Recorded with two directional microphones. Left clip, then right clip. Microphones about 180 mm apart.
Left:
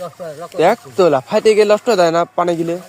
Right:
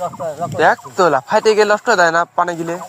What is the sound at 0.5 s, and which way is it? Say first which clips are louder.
Speech: left 1 dB; 50° left (ahead or behind).